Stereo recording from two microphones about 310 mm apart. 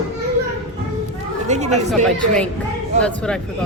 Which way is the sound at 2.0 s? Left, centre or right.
Centre.